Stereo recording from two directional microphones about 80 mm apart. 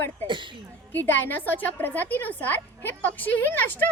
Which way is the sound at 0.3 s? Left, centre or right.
Right.